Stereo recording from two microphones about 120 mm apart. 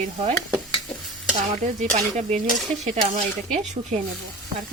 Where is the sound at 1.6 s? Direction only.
75° right (ahead or behind).